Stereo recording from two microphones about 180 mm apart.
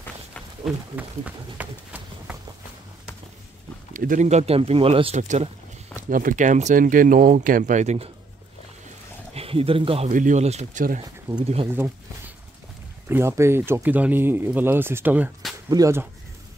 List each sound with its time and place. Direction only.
0.7 s speech: 10° right (ahead or behind)
3.9 s speech: 50° right (ahead or behind)
6.0 s speech: 50° right (ahead or behind)
9.3 s speech: 35° right (ahead or behind)
10.0 s speech: 45° right (ahead or behind)
13.1 s speech: 15° right (ahead or behind)